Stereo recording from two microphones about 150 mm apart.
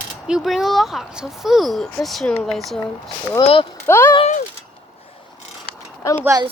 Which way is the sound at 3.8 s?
15° left (ahead or behind).